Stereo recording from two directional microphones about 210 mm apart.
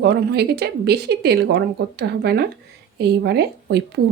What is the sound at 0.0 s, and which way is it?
A woman's voice, 50° right (ahead or behind).